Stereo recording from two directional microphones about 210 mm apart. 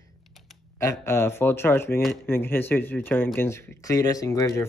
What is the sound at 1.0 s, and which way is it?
Speech, 10° left (ahead or behind).